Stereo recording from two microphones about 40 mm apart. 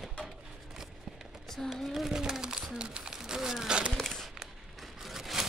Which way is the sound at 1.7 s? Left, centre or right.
Centre.